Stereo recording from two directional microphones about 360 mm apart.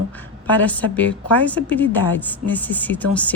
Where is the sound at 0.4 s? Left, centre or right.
Centre.